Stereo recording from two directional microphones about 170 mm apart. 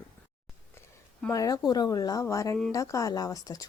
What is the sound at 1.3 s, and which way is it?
Speech, 20° left (ahead or behind).